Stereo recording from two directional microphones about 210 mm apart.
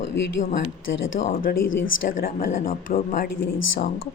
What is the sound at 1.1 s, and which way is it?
A woman's voice, 45° left (ahead or behind).